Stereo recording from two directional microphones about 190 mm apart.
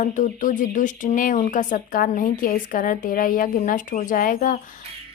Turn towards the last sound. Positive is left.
turn(degrees=45)  # may be behind; listen again after turning